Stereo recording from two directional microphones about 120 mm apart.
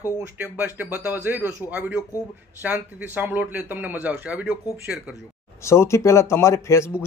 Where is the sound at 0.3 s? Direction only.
15° right (ahead or behind).